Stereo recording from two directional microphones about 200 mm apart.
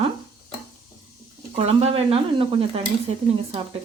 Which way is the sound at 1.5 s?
30° right (ahead or behind).